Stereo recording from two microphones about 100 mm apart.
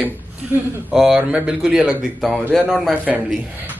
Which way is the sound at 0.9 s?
5° right (ahead or behind).